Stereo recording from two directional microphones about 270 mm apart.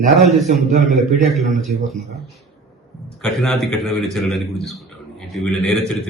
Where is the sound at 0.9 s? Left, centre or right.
Centre.